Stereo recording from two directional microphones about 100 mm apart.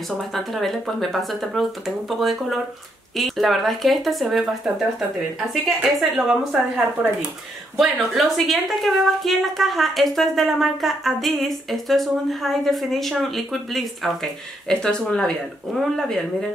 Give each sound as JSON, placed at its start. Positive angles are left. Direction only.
{"t": 0.3, "sound": "a woman's voice", "side_deg": 0}
{"t": 5.9, "sound": "a woman's voice", "side_deg": 0}
{"t": 7.7, "sound": "a woman's voice", "side_deg": 0}